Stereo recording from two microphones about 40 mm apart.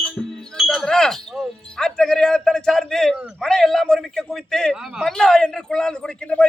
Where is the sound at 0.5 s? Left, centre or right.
Centre.